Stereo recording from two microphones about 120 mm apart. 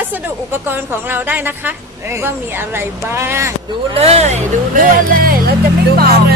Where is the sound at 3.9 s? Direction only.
60° right (ahead or behind); by 5.0 s 90° right.